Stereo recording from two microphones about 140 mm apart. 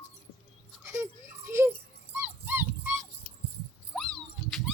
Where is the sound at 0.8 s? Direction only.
20° right (ahead or behind).